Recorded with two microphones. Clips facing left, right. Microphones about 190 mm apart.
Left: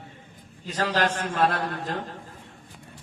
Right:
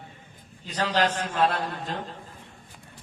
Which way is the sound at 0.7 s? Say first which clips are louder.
Even; 45° left (ahead or behind).